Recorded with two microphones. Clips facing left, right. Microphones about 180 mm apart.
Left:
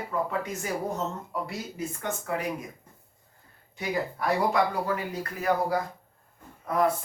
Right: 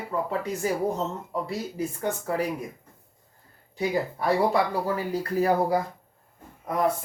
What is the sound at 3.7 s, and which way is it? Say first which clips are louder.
Speech: right 4 dB; 30° right (ahead or behind).